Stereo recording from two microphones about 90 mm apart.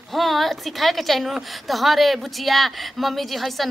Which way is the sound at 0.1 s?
Centre (ahead or behind).